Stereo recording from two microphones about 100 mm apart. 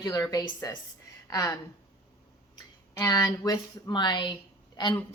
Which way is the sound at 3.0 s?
40° left (ahead or behind).